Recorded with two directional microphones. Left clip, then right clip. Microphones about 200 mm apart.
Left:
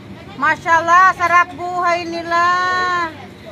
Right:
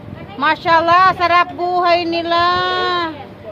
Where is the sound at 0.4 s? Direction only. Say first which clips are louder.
Right 1 dB; 20° right (ahead or behind).